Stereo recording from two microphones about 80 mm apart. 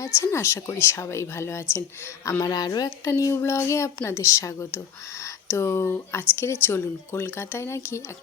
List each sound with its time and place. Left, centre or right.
0.0 s speech: left
2.4 s speech: left
3.1 s a sound: left
3.3 s speech: left